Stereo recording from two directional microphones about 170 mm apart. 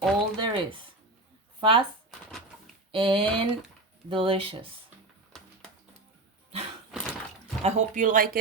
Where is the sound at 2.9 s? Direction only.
30° right (ahead or behind).